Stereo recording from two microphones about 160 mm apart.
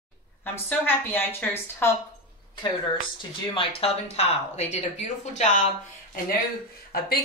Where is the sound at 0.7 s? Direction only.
10° left (ahead or behind).